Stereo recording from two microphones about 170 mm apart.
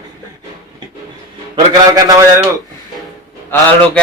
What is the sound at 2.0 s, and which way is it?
Speech, 20° right (ahead or behind).